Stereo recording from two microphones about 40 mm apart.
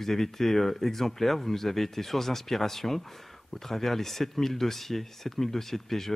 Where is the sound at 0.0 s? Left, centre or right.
Centre.